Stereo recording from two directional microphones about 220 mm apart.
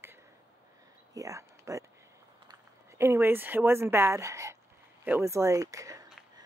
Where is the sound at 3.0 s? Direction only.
10° right (ahead or behind).